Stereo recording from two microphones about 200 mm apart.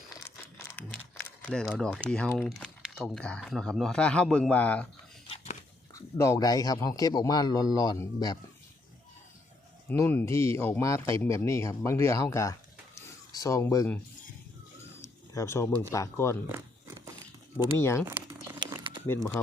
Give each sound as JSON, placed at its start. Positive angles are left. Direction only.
{"t": 0.8, "sound": "crumpling", "side_deg": 10}
{"t": 2.0, "sound": "speech", "side_deg": 5}
{"t": 5.9, "sound": "a man's voice", "side_deg": 15}
{"t": 9.9, "sound": "speech", "side_deg": 10}
{"t": 15.0, "sound": "bird", "side_deg": 15}
{"t": 15.9, "sound": "speech", "side_deg": 15}
{"t": 17.6, "sound": "speech", "side_deg": 15}
{"t": 18.1, "sound": "crumpling", "side_deg": -15}